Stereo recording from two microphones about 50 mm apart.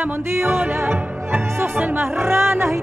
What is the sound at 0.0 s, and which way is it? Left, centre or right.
Music, right.